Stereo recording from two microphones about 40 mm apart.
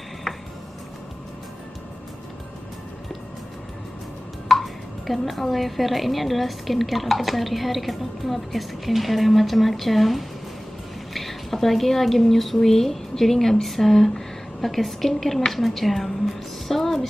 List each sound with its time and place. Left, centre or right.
4.5 s speech: centre